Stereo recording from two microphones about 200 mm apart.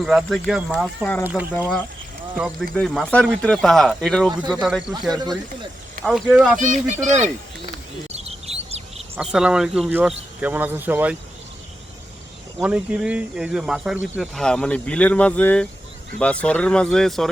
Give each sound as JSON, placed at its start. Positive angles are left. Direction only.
{"t": 0.0, "sound": "speech", "side_deg": 0}
{"t": 1.2, "sound": "speech", "side_deg": -10}
{"t": 1.5, "sound": "speech", "side_deg": 10}
{"t": 2.3, "sound": "speech", "side_deg": -5}
{"t": 5.1, "sound": "speech", "side_deg": -20}
{"t": 6.1, "sound": "speech", "side_deg": -5}
{"t": 6.6, "sound": "speech", "side_deg": -40}
{"t": 8.1, "sound": "chirp", "side_deg": -30}
{"t": 9.1, "sound": "speech", "side_deg": -5}
{"t": 12.5, "sound": "speech", "side_deg": -5}